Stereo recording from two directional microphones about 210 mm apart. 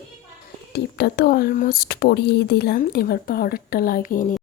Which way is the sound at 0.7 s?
50° left (ahead or behind).